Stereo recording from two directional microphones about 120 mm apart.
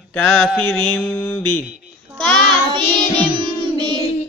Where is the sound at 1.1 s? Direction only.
20° left (ahead or behind).